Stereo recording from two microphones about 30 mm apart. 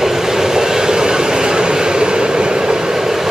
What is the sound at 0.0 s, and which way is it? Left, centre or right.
Vehicle, centre.